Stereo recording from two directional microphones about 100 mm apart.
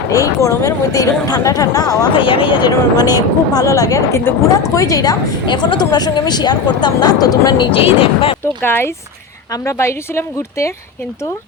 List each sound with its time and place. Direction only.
0.1 s speech: 30° left (ahead or behind)
2.1 s a woman's voice: 60° left (ahead or behind); by 7.7 s 40° left (ahead or behind)
7.7 s speech: 65° left (ahead or behind)
8.6 s a woman's voice: 20° left (ahead or behind)